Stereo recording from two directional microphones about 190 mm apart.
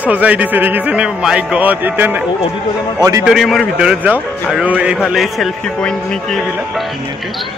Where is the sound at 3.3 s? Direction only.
Centre (ahead or behind).